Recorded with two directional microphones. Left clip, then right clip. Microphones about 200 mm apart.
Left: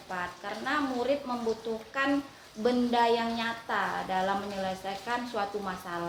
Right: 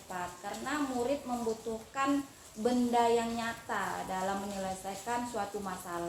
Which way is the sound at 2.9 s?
20° left (ahead or behind).